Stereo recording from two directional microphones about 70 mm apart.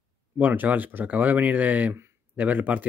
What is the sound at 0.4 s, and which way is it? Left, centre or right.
Speech, right.